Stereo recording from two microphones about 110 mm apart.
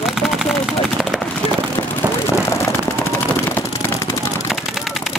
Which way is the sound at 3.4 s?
15° left (ahead or behind).